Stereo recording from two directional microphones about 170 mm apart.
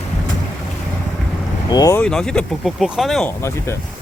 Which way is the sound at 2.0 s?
5° left (ahead or behind).